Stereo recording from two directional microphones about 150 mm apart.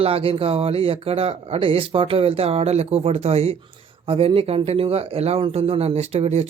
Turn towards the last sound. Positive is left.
turn(degrees=-45)  # may be behind; listen again after turning